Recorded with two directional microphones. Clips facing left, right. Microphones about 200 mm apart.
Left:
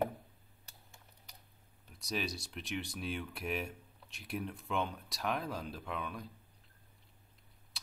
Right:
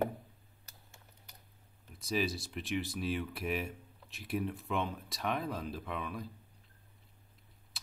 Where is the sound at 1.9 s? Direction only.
Centre (ahead or behind).